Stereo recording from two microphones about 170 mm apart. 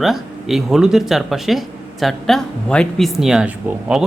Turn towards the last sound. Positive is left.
turn(degrees=-5)  # may be behind; listen again after turning